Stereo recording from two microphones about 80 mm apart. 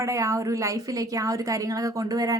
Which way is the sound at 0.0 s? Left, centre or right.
Right.